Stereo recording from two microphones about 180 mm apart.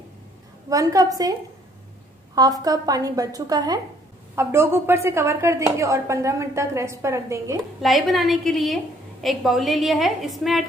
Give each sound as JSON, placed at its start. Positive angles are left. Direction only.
{"t": 0.7, "sound": "a woman's voice", "side_deg": -20}
{"t": 2.3, "sound": "a woman's voice", "side_deg": -20}
{"t": 7.8, "sound": "a woman's voice", "side_deg": 0}